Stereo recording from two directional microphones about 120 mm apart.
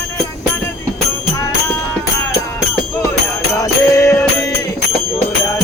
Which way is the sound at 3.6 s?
25° left (ahead or behind).